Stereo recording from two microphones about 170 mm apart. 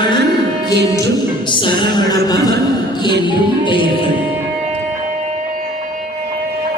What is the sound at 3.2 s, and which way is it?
Music, 30° left (ahead or behind).